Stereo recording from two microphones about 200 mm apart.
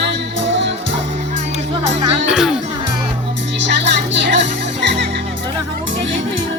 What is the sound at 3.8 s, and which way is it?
Music, 60° right (ahead or behind).